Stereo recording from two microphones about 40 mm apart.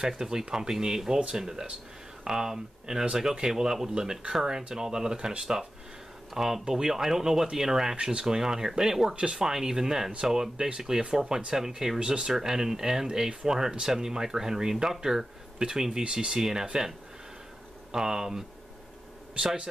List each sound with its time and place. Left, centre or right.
0.2 s speech: centre
9.1 s a man's voice: right
9.4 s a man's voice: centre
16.3 s speech: centre
17.9 s a man's voice: centre